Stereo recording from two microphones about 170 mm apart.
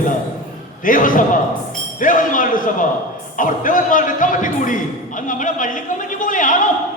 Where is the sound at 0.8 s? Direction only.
50° left (ahead or behind).